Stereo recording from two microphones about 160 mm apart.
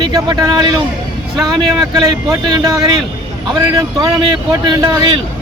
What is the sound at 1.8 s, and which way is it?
Speech, 25° right (ahead or behind).